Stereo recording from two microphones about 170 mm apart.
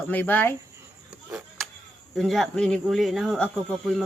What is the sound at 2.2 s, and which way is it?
Speech, centre (ahead or behind).